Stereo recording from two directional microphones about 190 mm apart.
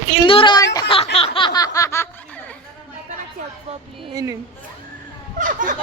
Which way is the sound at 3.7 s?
30° right (ahead or behind).